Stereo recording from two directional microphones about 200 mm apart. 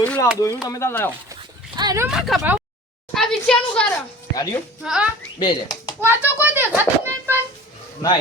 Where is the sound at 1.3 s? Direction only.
20° right (ahead or behind).